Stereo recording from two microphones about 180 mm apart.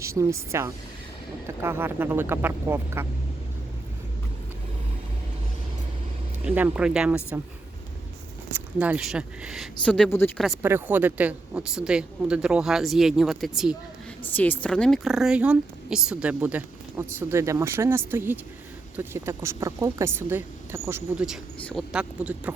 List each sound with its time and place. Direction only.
0.0 s speech: 15° right (ahead or behind)
6.4 s speech: 10° right (ahead or behind)
8.5 s a woman's voice: 10° right (ahead or behind)
9.8 s speech: 5° left (ahead or behind)
10.3 s a woman's voice: centre (ahead or behind)
10.6 s a woman's voice: 15° right (ahead or behind)
14.3 s speech: 10° left (ahead or behind); by 21.0 s 15° right (ahead or behind)
21.2 s a woman's voice: centre (ahead or behind)